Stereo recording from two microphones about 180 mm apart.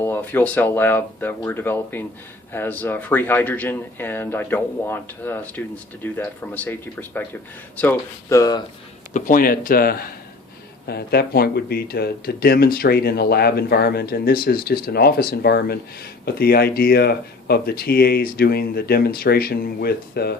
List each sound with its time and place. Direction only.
0.0 s speech: 10° left (ahead or behind)
9.1 s speech: 50° left (ahead or behind)